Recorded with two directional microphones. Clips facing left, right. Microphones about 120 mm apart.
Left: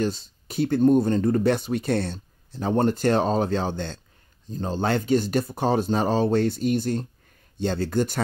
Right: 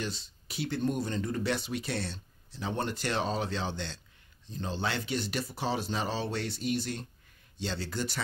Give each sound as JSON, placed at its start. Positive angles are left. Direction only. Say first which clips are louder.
{"t": 0.0, "sound": "speech", "louder": "left 11 dB", "side_deg": 45}